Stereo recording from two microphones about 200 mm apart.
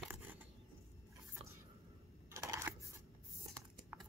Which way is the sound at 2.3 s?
15° right (ahead or behind).